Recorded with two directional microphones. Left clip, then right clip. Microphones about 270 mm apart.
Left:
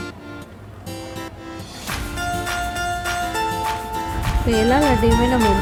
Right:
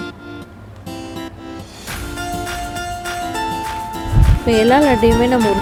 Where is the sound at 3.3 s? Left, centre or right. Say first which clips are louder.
Right 1 dB; centre.